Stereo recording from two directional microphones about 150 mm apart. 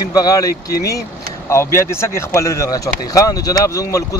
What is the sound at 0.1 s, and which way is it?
Speech, 25° left (ahead or behind).